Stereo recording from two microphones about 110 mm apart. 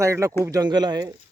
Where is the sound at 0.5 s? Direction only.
40° right (ahead or behind).